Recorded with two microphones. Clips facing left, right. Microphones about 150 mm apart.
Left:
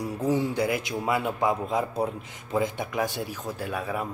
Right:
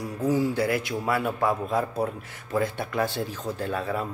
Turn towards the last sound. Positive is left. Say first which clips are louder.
# right 2 dB
turn(degrees=10)  # may be behind; listen again after turning